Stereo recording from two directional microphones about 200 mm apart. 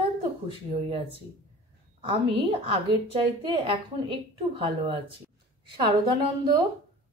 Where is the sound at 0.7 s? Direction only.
25° right (ahead or behind).